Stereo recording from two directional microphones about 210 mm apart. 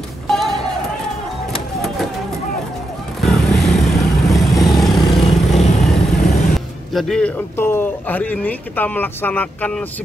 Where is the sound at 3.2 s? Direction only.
Centre (ahead or behind).